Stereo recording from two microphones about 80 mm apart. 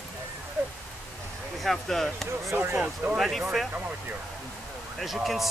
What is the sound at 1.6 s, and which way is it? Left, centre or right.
Speech, centre.